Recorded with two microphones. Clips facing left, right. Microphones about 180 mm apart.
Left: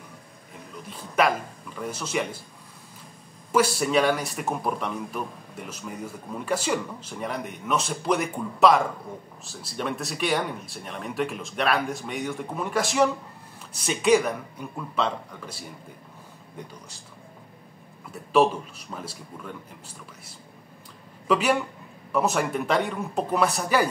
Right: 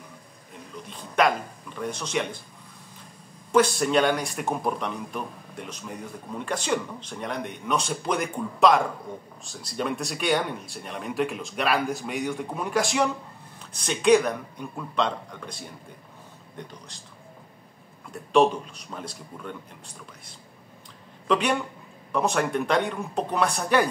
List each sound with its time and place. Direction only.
0.8 s speech: 5° left (ahead or behind)
3.5 s speech: 5° left (ahead or behind)
18.3 s speech: 5° left (ahead or behind)
21.3 s speech: 5° left (ahead or behind)